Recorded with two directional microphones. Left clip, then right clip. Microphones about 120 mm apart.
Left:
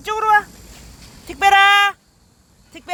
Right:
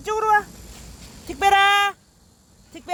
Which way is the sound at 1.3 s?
55° right (ahead or behind).